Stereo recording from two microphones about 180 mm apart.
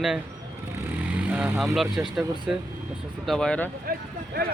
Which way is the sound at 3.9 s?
55° right (ahead or behind).